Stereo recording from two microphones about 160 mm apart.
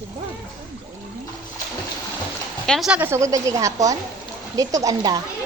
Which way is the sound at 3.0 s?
15° right (ahead or behind).